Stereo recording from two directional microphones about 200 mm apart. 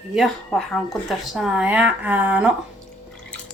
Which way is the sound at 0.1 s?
Centre (ahead or behind).